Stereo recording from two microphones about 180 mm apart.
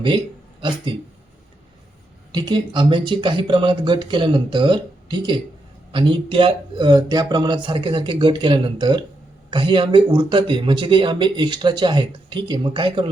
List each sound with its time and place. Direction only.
2.3 s speech: 25° right (ahead or behind)